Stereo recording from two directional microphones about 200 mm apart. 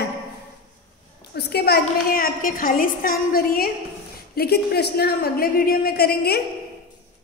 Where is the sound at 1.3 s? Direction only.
50° left (ahead or behind).